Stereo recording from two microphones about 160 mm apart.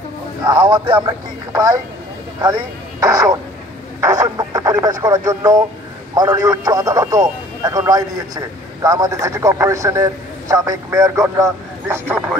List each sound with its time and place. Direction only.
0.5 s speech: 25° right (ahead or behind)